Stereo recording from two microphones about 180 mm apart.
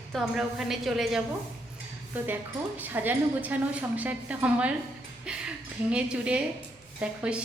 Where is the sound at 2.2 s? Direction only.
10° right (ahead or behind).